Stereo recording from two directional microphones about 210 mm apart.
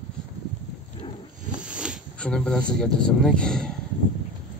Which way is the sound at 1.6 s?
5° right (ahead or behind).